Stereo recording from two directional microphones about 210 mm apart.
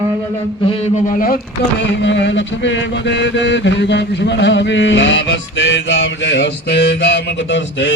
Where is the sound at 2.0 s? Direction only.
60° left (ahead or behind).